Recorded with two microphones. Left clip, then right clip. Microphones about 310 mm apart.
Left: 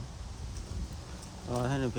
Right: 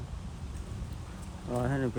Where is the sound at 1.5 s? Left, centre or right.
Centre.